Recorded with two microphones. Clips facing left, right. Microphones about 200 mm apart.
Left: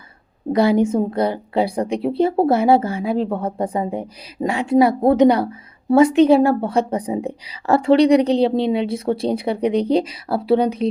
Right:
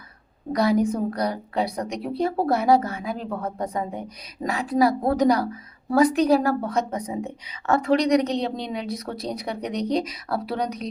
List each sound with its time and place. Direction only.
0.5 s a woman's voice: 25° left (ahead or behind)